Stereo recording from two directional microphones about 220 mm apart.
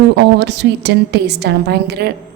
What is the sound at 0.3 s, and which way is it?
A woman's voice, 50° right (ahead or behind).